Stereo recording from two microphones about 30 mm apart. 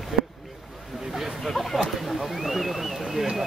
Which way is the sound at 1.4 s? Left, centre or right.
Centre.